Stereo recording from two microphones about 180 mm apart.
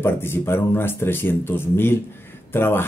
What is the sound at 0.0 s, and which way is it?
Speech, 15° left (ahead or behind).